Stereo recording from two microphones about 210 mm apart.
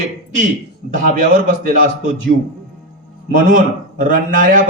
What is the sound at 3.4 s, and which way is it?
A man's voice, 40° right (ahead or behind).